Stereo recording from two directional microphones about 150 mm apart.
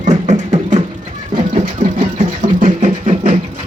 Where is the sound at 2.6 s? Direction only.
50° right (ahead or behind).